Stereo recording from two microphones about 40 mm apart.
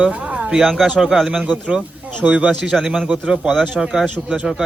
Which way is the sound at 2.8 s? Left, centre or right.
Centre.